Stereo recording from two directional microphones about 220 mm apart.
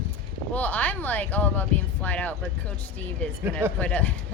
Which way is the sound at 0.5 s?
5° left (ahead or behind).